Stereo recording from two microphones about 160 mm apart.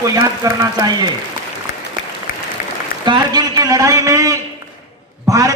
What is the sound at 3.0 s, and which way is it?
A man's voice, 25° right (ahead or behind).